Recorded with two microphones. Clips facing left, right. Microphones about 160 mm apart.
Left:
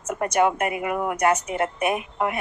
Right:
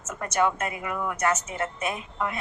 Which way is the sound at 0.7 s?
65° left (ahead or behind).